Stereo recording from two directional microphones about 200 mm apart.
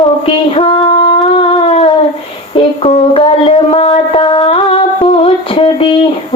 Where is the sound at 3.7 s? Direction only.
30° left (ahead or behind).